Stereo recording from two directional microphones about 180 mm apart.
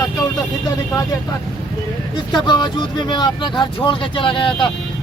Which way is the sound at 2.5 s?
25° left (ahead or behind).